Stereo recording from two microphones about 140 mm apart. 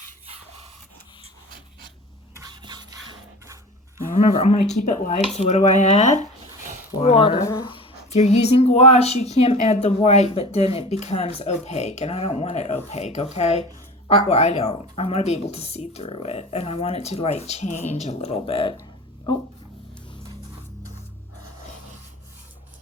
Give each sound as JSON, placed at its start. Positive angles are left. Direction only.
{"t": 2.5, "sound": "a sound", "side_deg": -35}
{"t": 4.3, "sound": "speech", "side_deg": 45}
{"t": 7.0, "sound": "speech", "side_deg": 45}
{"t": 7.4, "sound": "speech", "side_deg": 25}
{"t": 7.7, "sound": "a sound", "side_deg": 40}
{"t": 8.2, "sound": "speech", "side_deg": 50}